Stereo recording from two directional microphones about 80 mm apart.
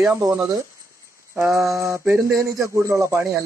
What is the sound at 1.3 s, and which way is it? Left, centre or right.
Speech, right.